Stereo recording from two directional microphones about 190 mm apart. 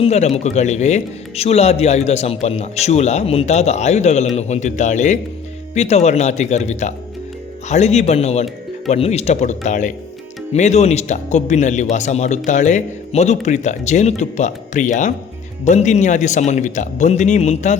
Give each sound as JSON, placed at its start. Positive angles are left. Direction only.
{"t": 0.0, "sound": "speech", "side_deg": 35}